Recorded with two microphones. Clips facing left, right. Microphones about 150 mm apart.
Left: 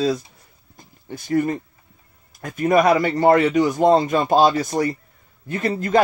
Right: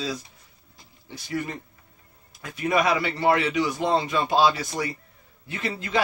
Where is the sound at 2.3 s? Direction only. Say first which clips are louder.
Left 7 dB; 45° left (ahead or behind).